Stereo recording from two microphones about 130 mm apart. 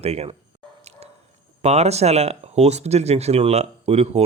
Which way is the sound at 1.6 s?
55° right (ahead or behind).